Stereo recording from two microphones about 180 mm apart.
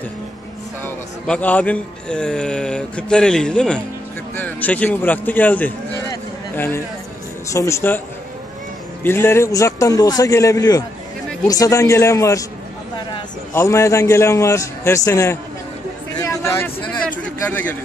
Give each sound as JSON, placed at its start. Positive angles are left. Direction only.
{"t": 0.8, "sound": "a man's voice", "side_deg": 10}
{"t": 9.0, "sound": "a man's voice", "side_deg": 15}
{"t": 16.2, "sound": "a sound", "side_deg": 15}